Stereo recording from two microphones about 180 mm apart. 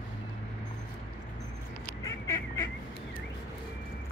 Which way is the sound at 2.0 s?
15° left (ahead or behind).